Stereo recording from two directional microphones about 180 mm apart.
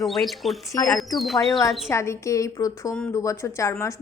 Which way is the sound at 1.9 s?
15° left (ahead or behind).